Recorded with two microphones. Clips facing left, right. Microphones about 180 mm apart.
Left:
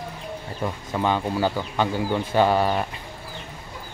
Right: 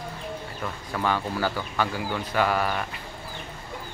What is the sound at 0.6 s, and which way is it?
Speech, 20° left (ahead or behind).